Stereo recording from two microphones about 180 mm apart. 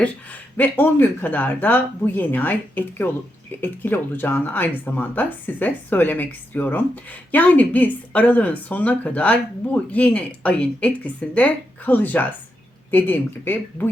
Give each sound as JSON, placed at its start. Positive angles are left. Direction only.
{"t": 0.0, "sound": "speech", "side_deg": 10}